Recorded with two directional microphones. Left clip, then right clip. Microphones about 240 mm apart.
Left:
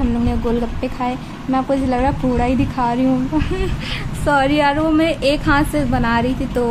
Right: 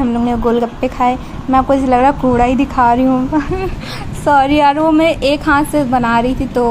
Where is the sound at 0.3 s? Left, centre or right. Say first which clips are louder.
Right 7 dB; centre.